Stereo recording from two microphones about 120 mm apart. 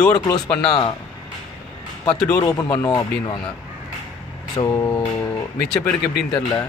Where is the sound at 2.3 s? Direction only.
35° left (ahead or behind).